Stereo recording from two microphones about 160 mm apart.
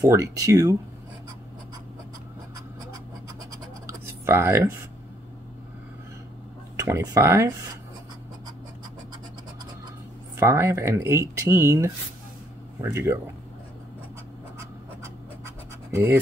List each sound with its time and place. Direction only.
0.0 s speech: 20° right (ahead or behind)
3.8 s a sound: 15° right (ahead or behind)
6.8 s speech: 20° right (ahead or behind)
10.3 s speech: 15° right (ahead or behind)
15.4 s scratch: 15° right (ahead or behind)